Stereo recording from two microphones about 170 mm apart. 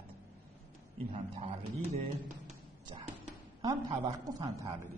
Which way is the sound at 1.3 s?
40° right (ahead or behind).